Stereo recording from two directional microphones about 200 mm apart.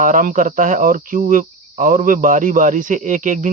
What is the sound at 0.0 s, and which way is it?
Speech, 40° right (ahead or behind).